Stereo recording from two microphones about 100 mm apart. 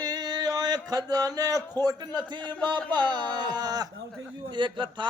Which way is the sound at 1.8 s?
45° right (ahead or behind).